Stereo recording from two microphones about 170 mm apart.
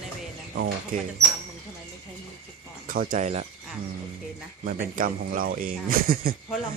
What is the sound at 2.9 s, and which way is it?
Speech, 55° right (ahead or behind).